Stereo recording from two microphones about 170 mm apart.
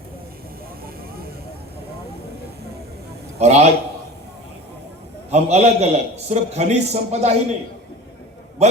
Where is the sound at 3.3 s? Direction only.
40° right (ahead or behind).